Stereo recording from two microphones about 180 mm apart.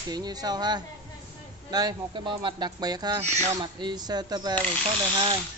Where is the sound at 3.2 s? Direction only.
40° right (ahead or behind).